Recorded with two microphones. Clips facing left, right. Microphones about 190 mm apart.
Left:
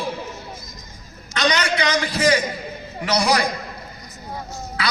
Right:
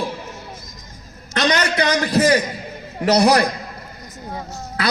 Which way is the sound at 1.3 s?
55° right (ahead or behind).